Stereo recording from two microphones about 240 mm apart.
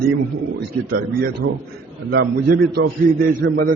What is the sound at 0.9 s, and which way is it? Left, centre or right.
A man's voice, right.